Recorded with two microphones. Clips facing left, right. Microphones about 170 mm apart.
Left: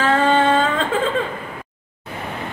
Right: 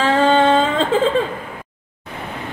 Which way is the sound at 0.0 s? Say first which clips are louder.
Right 2 dB; 30° right (ahead or behind).